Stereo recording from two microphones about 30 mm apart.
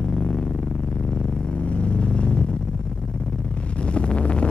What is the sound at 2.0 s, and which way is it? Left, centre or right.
Vehicle, left.